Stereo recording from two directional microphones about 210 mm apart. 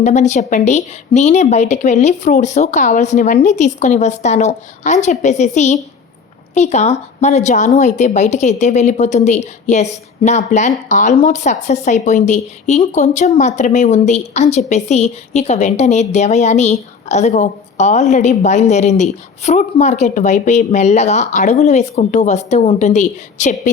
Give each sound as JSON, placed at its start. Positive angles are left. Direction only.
{"t": 0.0, "sound": "a woman's voice", "side_deg": 35}